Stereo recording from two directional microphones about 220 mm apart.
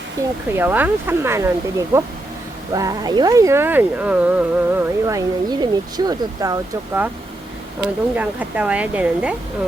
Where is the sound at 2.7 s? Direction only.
15° right (ahead or behind).